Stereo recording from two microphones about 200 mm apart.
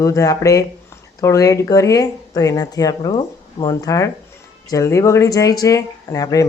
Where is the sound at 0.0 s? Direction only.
15° left (ahead or behind).